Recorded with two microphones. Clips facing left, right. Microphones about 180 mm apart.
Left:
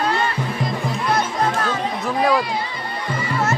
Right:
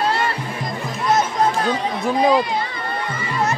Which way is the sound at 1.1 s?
20° right (ahead or behind).